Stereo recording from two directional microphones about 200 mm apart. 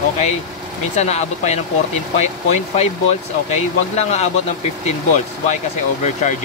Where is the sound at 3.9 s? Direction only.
35° left (ahead or behind).